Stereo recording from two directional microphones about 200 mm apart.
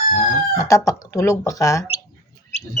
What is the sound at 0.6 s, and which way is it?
Speech, 15° left (ahead or behind).